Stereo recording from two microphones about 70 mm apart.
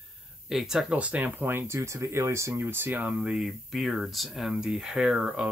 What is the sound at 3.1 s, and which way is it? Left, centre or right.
Speech, centre.